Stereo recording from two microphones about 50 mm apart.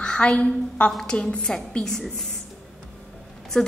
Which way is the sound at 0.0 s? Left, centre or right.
Centre.